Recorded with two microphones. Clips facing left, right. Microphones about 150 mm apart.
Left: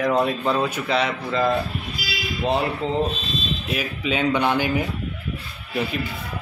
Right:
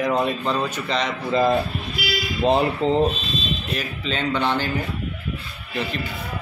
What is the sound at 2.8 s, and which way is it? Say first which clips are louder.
Speech: right 5 dB; 25° right (ahead or behind).